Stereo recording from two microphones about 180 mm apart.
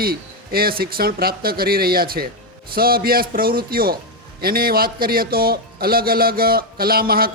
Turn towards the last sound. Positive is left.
turn(degrees=-55)  # may be behind; listen again after turning